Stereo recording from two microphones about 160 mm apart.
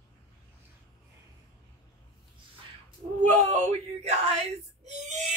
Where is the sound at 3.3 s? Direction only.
45° right (ahead or behind).